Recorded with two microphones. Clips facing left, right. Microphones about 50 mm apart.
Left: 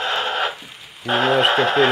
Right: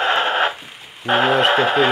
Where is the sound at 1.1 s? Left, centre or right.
Centre.